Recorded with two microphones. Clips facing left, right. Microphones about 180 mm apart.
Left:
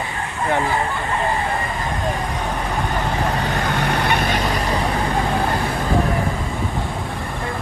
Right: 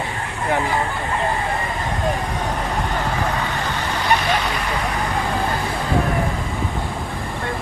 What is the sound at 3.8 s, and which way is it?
Vehicle, 60° left (ahead or behind).